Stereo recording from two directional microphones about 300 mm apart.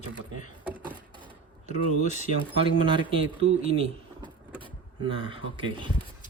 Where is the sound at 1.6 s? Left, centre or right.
Left.